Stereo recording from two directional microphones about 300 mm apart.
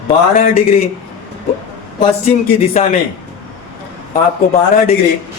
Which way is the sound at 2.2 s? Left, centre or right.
Left.